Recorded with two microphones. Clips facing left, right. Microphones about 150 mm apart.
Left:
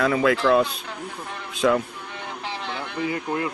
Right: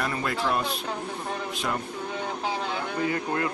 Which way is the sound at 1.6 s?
90° left.